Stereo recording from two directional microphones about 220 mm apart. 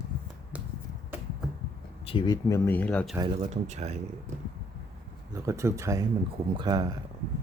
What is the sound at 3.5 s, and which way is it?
Speech, 30° right (ahead or behind).